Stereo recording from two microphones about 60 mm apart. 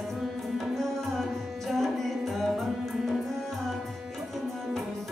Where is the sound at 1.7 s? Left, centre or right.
Centre.